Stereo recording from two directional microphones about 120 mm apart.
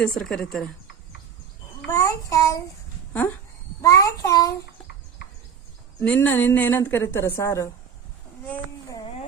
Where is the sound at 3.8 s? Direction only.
25° left (ahead or behind).